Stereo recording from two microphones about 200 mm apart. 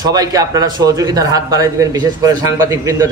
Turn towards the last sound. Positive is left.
turn(degrees=-15)  # may be behind; listen again after turning